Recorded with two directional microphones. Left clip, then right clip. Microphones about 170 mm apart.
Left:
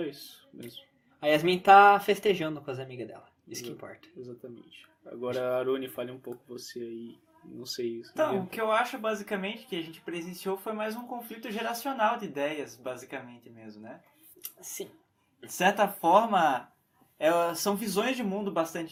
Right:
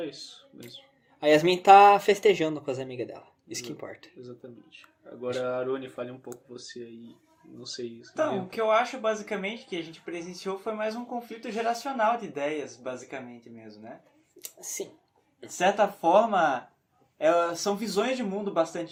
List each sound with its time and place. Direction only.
1.2 s speech: 40° right (ahead or behind)
5.0 s speech: 25° left (ahead or behind)
7.6 s speech: 30° left (ahead or behind)
8.2 s speech: 20° left (ahead or behind)
14.3 s speech: 35° right (ahead or behind)
15.5 s speech: 25° left (ahead or behind)